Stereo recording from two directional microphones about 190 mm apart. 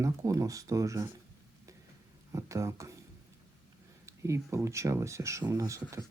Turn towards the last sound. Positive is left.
turn(degrees=-15)  # may be behind; listen again after turning